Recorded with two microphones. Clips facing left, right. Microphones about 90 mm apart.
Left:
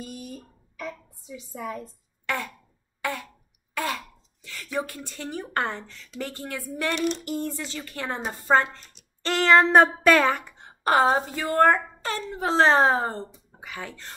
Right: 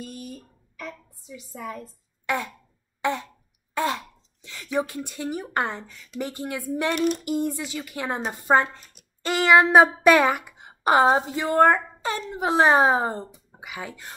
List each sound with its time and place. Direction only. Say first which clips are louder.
0.0 s a sound: right 1 dB; centre (ahead or behind)
2.2 s throat clearing: right 3 dB; 20° right (ahead or behind)
3.7 s speech: right 4 dB; 20° right (ahead or behind)